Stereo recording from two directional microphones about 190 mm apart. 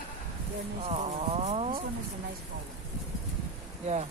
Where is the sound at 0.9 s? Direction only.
35° right (ahead or behind).